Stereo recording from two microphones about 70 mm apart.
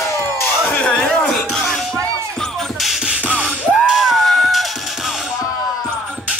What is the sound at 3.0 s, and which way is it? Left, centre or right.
Music, right.